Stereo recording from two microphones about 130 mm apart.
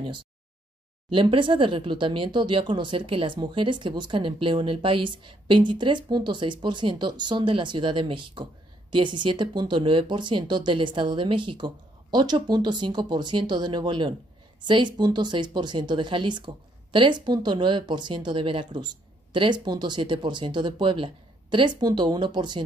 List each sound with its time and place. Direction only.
0.0 s speech: 40° right (ahead or behind)